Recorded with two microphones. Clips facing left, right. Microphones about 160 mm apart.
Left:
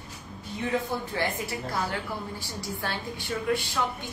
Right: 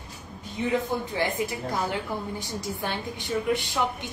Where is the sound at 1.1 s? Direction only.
20° right (ahead or behind).